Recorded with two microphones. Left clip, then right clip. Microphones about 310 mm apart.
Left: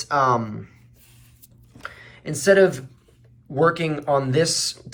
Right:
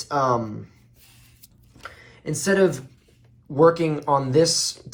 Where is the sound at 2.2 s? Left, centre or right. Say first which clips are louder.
Left 4 dB; centre.